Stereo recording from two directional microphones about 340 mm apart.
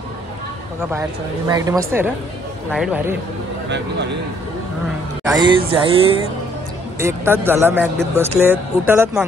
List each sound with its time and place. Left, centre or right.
1.5 s a man's voice: centre
5.2 s speech: centre